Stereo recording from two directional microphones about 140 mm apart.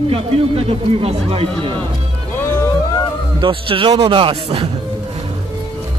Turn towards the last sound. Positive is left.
turn(degrees=-40)  # may be behind; listen again after turning